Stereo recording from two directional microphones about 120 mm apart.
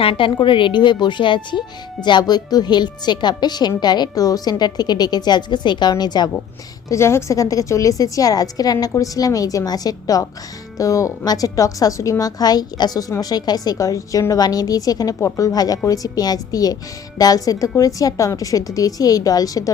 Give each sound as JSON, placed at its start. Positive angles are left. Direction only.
{"t": 0.0, "sound": "a woman's voice", "side_deg": 45}
{"t": 6.8, "sound": "a woman's voice", "side_deg": 25}